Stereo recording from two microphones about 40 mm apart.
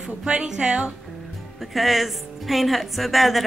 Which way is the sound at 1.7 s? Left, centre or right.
Centre.